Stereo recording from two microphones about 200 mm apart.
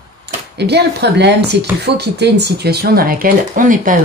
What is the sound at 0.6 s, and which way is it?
Speech, 55° right (ahead or behind).